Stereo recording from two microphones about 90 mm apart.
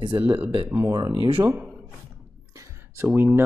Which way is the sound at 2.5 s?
35° right (ahead or behind).